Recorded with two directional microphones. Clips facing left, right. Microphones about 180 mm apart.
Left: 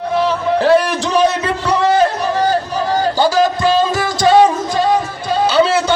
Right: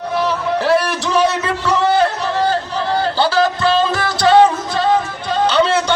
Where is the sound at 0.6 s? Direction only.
20° left (ahead or behind).